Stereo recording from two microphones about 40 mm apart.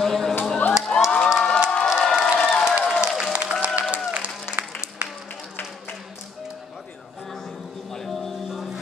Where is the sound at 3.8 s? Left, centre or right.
Right.